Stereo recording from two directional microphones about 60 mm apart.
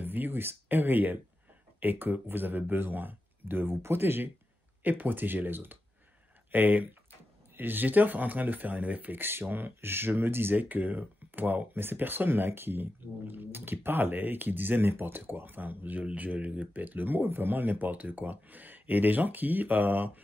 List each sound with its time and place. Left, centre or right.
0.0 s speech: right